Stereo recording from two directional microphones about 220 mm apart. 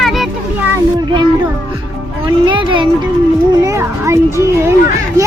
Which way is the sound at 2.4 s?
20° right (ahead or behind).